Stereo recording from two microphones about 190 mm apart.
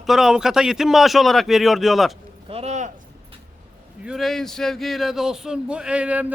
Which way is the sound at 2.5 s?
35° right (ahead or behind).